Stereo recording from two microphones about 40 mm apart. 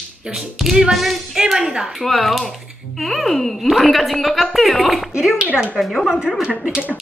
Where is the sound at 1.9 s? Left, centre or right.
Centre.